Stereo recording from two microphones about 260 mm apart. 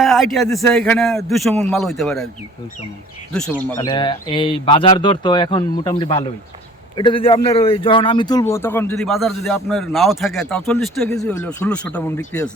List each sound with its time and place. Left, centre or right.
0.0 s a man's voice: centre
3.3 s a man's voice: centre
3.8 s a man's voice: centre